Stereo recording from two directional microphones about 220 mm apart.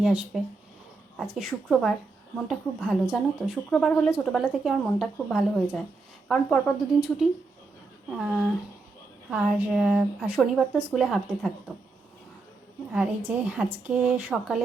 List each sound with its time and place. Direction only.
0.0 s speech: 5° right (ahead or behind)
8.1 s speech: 5° right (ahead or behind)
12.9 s a woman's voice: 5° right (ahead or behind)